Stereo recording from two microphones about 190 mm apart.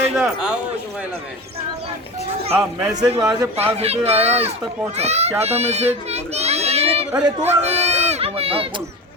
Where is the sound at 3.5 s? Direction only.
35° right (ahead or behind).